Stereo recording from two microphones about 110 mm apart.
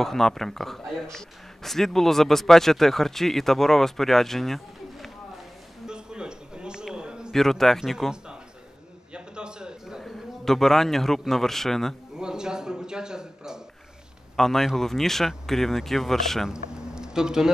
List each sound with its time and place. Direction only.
0.0 s speech: 5° left (ahead or behind)
5.9 s a sound: 5° right (ahead or behind)
7.3 s a man's voice: 5° left (ahead or behind)